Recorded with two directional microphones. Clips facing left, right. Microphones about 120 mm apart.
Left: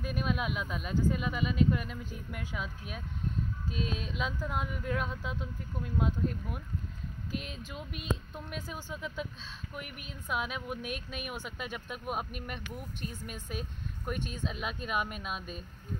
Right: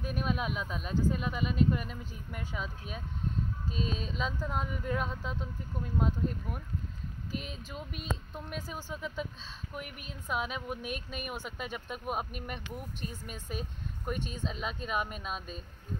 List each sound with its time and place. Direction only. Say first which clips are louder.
0.0 s speech: even; centre (ahead or behind)
3.7 s a sound: even; 40° right (ahead or behind)
4.2 s speech: even; 5° left (ahead or behind)